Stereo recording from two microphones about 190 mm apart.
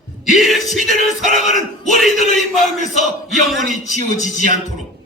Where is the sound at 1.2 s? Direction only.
40° left (ahead or behind).